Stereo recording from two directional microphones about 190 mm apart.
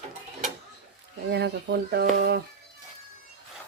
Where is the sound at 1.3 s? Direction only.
65° right (ahead or behind).